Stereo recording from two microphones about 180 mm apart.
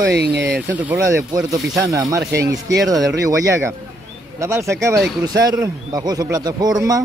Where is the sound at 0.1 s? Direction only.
65° right (ahead or behind).